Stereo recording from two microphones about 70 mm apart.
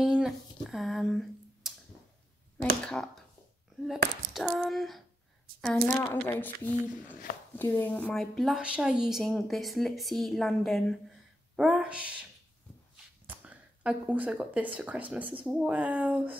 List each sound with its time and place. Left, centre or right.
0.0 s a sound: centre
2.8 s speech: centre
3.8 s a woman's voice: centre
6.0 s speech: left
8.1 s speech: centre
8.5 s speech: centre
11.5 s speech: centre
13.4 s speech: centre